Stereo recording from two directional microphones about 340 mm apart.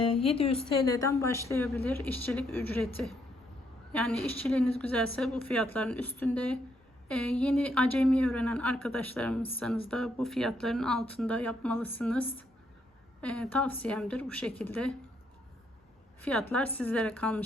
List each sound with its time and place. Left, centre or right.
0.1 s a woman's voice: centre
16.2 s a woman's voice: centre